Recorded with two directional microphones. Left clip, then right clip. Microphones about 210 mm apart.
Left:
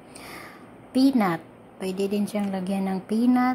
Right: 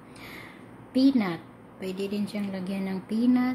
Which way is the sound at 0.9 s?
15° left (ahead or behind).